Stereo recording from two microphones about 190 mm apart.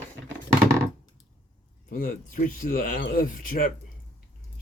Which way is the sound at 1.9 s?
45° left (ahead or behind).